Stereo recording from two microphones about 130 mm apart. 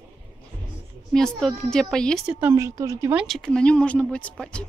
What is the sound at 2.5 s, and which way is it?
Speech, 25° right (ahead or behind).